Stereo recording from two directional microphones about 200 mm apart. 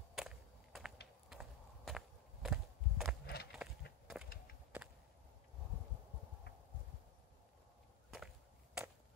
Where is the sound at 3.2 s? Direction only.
50° left (ahead or behind).